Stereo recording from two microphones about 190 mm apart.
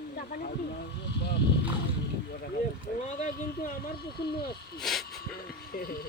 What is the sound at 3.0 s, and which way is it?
Speech, 40° left (ahead or behind).